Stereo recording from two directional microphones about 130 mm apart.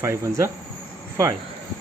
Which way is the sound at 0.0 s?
20° right (ahead or behind).